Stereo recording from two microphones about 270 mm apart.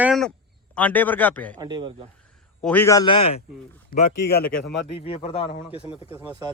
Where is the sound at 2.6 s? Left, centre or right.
Centre.